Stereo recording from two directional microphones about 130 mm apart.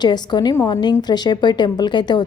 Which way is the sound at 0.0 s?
35° left (ahead or behind).